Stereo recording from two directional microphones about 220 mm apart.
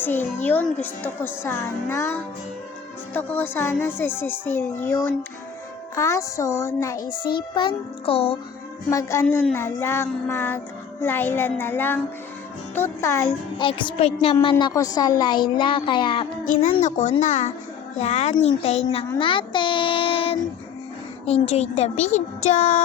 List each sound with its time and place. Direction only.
0.0 s a child's voice: 10° left (ahead or behind); by 8.4 s 25° left (ahead or behind)
8.9 s a child's voice: 15° left (ahead or behind)
14.5 s a woman's voice: 15° left (ahead or behind)
16.4 s a child's voice: 35° left (ahead or behind)
21.4 s a child's voice: 30° left (ahead or behind)